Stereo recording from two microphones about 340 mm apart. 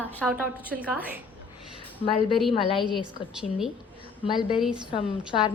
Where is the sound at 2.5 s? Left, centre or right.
Centre.